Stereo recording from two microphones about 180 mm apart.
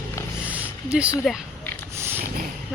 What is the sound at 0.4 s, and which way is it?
Roaring cats, 10° right (ahead or behind).